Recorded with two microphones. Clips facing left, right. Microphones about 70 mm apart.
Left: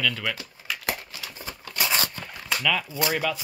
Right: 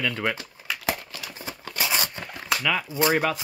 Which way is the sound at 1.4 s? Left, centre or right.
Centre.